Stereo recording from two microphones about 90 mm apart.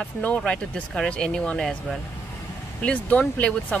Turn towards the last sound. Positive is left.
turn(degrees=15)  # may be behind; listen again after turning